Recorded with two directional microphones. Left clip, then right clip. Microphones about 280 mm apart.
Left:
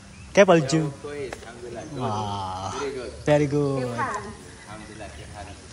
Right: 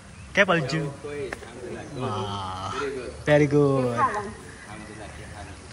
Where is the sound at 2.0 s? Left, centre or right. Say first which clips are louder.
Left 2 dB; centre.